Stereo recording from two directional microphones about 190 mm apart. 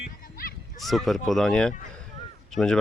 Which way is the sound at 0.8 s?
Centre (ahead or behind).